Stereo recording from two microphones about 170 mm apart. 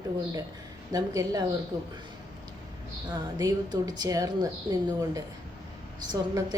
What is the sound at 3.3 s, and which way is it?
A woman's voice, 20° right (ahead or behind).